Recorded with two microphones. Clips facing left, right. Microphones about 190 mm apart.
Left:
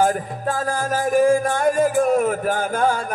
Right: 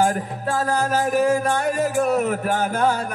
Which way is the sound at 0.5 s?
45° left (ahead or behind).